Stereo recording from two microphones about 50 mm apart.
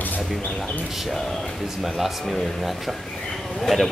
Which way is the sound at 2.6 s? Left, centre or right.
Centre.